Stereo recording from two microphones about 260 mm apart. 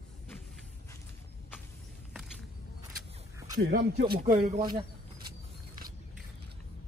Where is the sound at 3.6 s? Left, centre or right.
Right.